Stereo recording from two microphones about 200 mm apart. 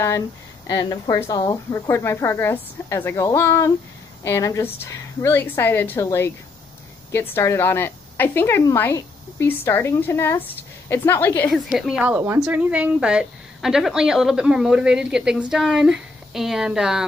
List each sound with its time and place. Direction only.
0.7 s a woman's voice: 20° left (ahead or behind); by 17.0 s 5° right (ahead or behind)